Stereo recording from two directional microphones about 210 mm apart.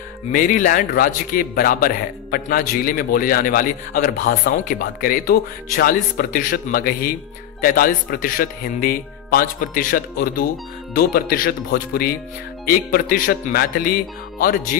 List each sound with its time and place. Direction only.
0.3 s a man's voice: 40° left (ahead or behind)